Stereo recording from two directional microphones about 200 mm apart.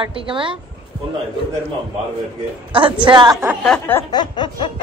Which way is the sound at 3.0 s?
20° right (ahead or behind).